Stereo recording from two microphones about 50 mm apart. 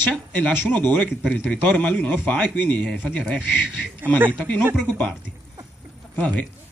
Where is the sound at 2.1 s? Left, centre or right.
Left.